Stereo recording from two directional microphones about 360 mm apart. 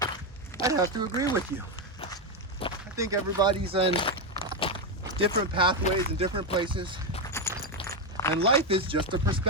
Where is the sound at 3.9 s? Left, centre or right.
Centre.